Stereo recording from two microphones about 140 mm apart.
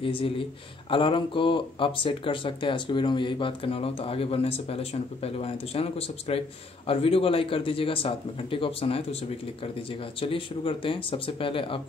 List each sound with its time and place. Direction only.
0.0 s speech: 40° left (ahead or behind)